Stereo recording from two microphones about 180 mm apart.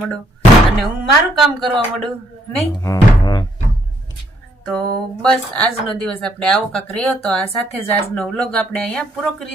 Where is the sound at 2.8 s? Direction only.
20° left (ahead or behind).